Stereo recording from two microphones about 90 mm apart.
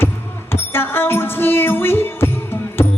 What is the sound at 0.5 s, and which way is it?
Music, 25° left (ahead or behind).